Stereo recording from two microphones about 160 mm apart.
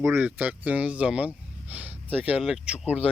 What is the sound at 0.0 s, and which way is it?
Speech, 10° right (ahead or behind).